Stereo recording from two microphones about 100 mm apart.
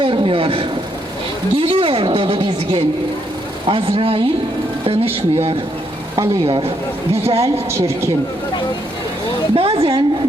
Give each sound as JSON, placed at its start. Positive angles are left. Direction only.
{"t": 0.0, "sound": "a woman's voice", "side_deg": -65}
{"t": 4.9, "sound": "speech", "side_deg": -80}
{"t": 7.3, "sound": "a woman's voice", "side_deg": -85}
{"t": 7.7, "sound": "speech", "side_deg": -25}
{"t": 9.6, "sound": "a woman's voice", "side_deg": -70}